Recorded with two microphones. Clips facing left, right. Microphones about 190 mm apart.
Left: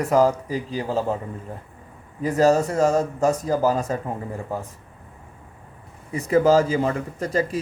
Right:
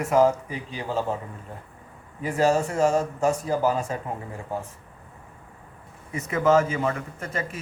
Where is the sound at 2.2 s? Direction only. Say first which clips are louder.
Left 4 dB; 40° left (ahead or behind).